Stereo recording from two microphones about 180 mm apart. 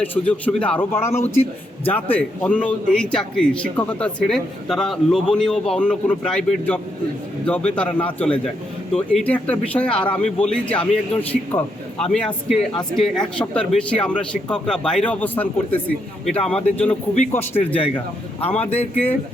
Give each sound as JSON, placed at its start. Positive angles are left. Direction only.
{"t": 0.0, "sound": "a man's voice", "side_deg": 10}
{"t": 17.7, "sound": "a man's voice", "side_deg": 30}
{"t": 18.7, "sound": "speech", "side_deg": 10}